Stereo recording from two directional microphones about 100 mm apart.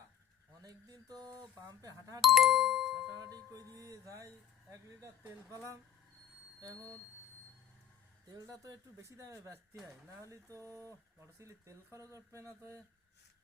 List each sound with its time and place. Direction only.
0.6 s speech: 40° right (ahead or behind)
2.2 s music: centre (ahead or behind)
3.1 s speech: 40° right (ahead or behind)
8.4 s speech: 30° right (ahead or behind)